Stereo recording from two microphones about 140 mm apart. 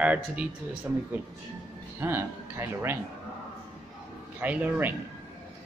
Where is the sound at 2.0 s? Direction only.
15° right (ahead or behind).